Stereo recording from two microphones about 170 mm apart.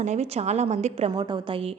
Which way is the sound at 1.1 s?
25° right (ahead or behind).